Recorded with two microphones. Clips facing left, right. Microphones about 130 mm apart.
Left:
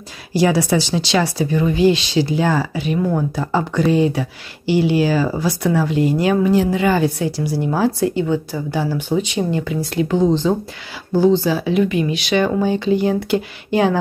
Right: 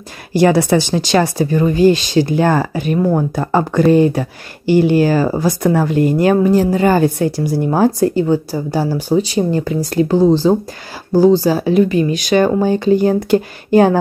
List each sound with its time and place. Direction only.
0.3 s speech: 55° right (ahead or behind)